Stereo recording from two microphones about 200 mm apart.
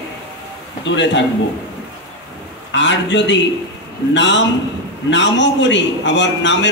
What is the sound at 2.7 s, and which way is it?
A man's voice, 65° left (ahead or behind).